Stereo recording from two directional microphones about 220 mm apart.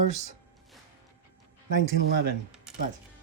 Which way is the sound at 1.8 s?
45° right (ahead or behind).